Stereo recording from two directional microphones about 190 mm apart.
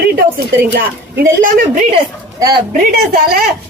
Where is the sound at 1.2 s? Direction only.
45° right (ahead or behind).